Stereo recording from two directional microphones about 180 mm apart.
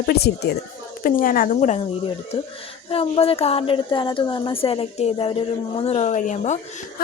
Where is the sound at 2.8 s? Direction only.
30° left (ahead or behind).